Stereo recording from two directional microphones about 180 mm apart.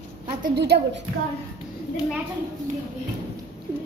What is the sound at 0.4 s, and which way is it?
Speech, 60° right (ahead or behind).